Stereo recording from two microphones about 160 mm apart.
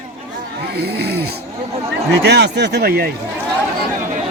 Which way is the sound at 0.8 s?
90° right.